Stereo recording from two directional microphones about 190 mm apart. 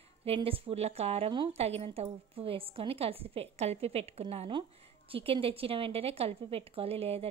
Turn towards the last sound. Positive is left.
turn(degrees=-30)  # may be behind; listen again after turning